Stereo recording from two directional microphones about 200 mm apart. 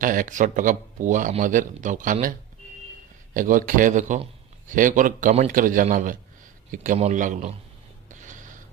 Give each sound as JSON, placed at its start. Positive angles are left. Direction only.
{"t": 0.0, "sound": "speech", "side_deg": -40}
{"t": 3.3, "sound": "speech", "side_deg": -45}
{"t": 8.1, "sound": "a sound", "side_deg": -40}